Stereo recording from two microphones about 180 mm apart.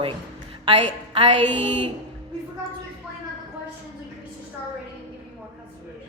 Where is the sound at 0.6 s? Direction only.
35° right (ahead or behind).